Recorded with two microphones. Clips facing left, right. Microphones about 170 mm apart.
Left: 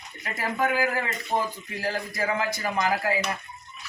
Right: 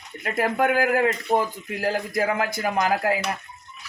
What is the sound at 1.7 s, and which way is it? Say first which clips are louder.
Speech: right 5 dB; 50° right (ahead or behind).